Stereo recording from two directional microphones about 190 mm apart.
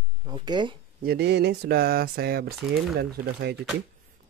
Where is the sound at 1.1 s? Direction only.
60° right (ahead or behind).